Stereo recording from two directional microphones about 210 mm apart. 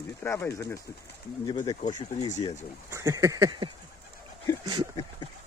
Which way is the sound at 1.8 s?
35° left (ahead or behind).